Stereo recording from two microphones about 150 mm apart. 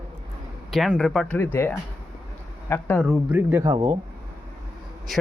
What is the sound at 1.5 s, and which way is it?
Speech, 15° left (ahead or behind).